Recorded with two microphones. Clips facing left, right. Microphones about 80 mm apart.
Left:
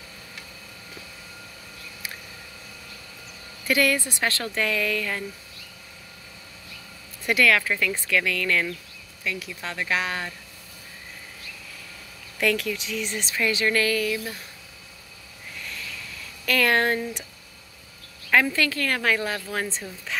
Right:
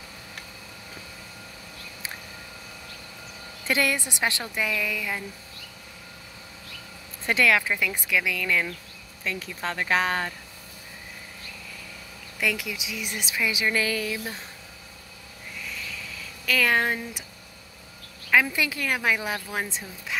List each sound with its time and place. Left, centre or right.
3.6 s a woman's voice: right
7.2 s a woman's voice: right
9.2 s speech: right
12.4 s a woman's voice: centre; by 14.4 s right
16.4 s speech: centre
18.3 s a woman's voice: centre